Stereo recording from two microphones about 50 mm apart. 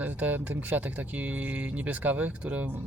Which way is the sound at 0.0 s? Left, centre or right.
Right.